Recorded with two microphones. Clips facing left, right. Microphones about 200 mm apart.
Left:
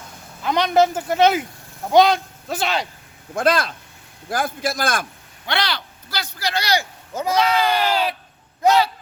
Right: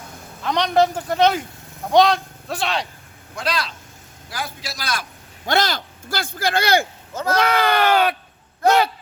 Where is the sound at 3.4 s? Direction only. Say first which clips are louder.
Left 7 dB; 50° left (ahead or behind).